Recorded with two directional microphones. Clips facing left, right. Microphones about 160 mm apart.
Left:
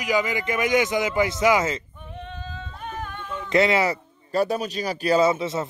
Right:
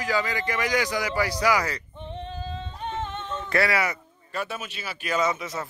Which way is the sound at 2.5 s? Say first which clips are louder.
Right 2 dB; 30° right (ahead or behind).